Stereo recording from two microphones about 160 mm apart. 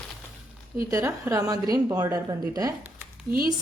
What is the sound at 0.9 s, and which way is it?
A woman's voice, 15° right (ahead or behind).